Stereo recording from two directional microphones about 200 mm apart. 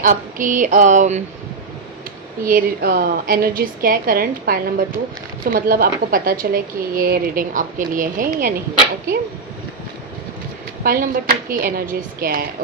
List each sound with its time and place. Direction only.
0.0 s a sound: 40° right (ahead or behind)
2.4 s speech: 45° right (ahead or behind)
10.8 s speech: 45° right (ahead or behind)